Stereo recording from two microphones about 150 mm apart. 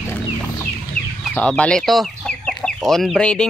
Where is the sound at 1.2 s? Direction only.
5° left (ahead or behind).